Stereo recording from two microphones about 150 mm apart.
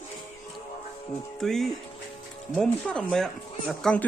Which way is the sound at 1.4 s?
Centre (ahead or behind).